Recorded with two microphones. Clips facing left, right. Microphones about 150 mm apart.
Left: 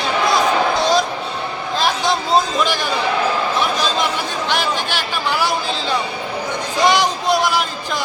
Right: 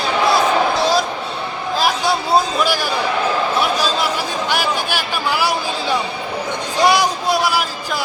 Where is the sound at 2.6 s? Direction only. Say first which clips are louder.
Right 1 dB; 10° right (ahead or behind).